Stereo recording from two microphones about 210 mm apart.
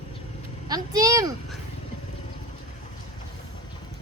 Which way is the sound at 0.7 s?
20° right (ahead or behind).